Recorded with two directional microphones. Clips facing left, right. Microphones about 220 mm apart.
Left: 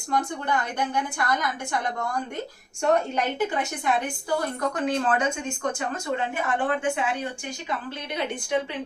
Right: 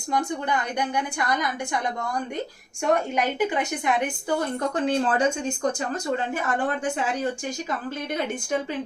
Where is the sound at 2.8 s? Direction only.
10° right (ahead or behind).